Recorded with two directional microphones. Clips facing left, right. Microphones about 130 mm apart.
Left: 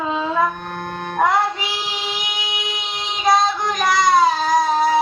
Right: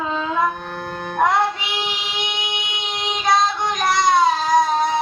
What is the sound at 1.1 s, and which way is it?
Music, centre (ahead or behind).